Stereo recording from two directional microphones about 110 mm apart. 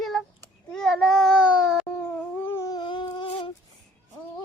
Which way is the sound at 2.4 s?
20° left (ahead or behind).